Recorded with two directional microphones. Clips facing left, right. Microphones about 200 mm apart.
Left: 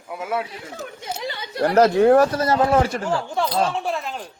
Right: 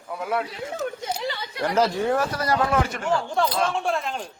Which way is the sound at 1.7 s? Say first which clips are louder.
Left 8 dB; 65° left (ahead or behind).